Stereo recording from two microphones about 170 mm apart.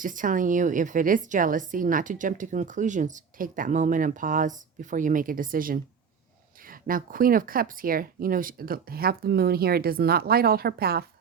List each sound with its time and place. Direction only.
0.0 s a woman's voice: 50° right (ahead or behind)